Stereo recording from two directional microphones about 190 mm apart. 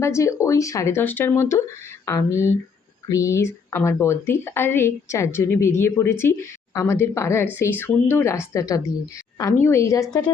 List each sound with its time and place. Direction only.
0.0 s speech: 15° left (ahead or behind)